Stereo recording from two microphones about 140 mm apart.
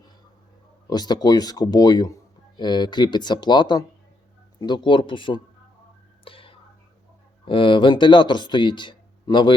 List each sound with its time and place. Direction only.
0.9 s speech: 30° left (ahead or behind)
6.2 s whispering: 40° left (ahead or behind)
7.4 s speech: 40° left (ahead or behind)